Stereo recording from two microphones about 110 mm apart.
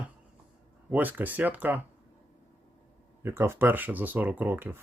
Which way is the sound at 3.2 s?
25° right (ahead or behind).